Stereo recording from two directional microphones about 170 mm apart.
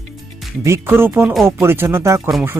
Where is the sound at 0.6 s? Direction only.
15° right (ahead or behind).